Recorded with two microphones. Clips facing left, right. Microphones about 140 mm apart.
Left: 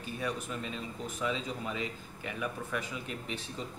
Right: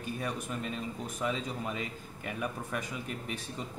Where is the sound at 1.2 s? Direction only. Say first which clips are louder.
Right 1 dB; 45° right (ahead or behind).